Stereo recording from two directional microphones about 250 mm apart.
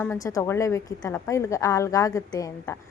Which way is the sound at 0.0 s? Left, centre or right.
Centre.